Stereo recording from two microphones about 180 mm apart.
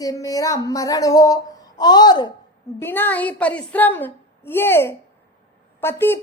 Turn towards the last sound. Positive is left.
turn(degrees=10)  # may be behind; listen again after turning